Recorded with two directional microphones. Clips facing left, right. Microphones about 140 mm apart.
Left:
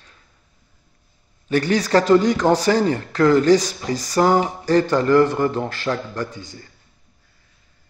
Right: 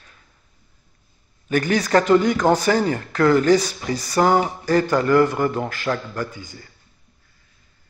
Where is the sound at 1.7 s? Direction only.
35° left (ahead or behind).